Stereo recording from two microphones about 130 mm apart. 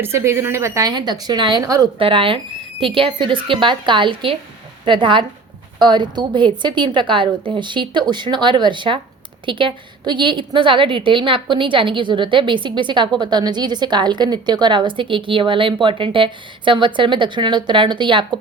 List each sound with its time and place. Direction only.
0.0 s speech: 20° right (ahead or behind)
2.0 s a woman's voice: 45° right (ahead or behind)